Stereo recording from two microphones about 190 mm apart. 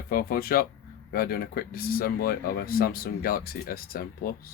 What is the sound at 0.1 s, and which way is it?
Speech, 50° left (ahead or behind).